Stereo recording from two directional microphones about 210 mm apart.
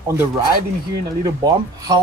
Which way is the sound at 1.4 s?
20° right (ahead or behind).